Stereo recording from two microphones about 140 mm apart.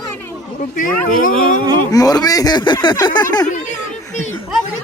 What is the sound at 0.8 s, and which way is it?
Speech, 80° left.